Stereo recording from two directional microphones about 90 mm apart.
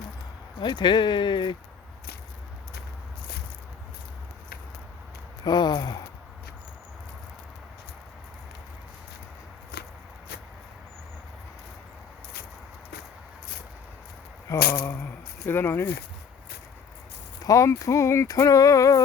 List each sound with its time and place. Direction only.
0.6 s speech: 60° left (ahead or behind)
5.5 s a sound: 55° left (ahead or behind)
14.5 s speech: 25° left (ahead or behind)
17.4 s speech: 40° left (ahead or behind)